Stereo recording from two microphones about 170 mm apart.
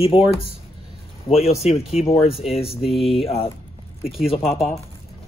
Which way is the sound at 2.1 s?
35° left (ahead or behind).